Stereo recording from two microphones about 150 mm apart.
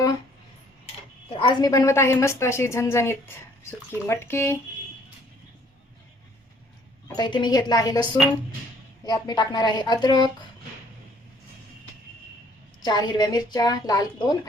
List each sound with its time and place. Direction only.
1.3 s a woman's voice: 35° left (ahead or behind); by 4.5 s 15° left (ahead or behind)
7.2 s a woman's voice: 30° left (ahead or behind)
9.0 s a woman's voice: 25° left (ahead or behind)
12.8 s a woman's voice: 25° left (ahead or behind)